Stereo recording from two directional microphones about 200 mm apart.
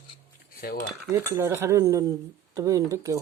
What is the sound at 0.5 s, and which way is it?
Cutlery, 45° left (ahead or behind).